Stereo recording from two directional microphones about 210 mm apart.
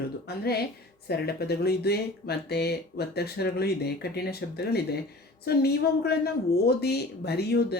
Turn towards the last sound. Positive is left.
turn(degrees=50)  # may be behind; listen again after turning